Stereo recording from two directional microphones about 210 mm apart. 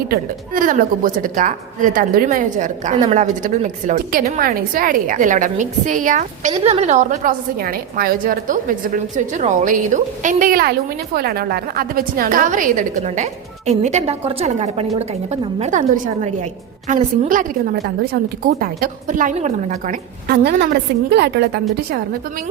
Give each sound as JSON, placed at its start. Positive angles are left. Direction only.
{"t": 0.1, "sound": "a woman's voice", "side_deg": -40}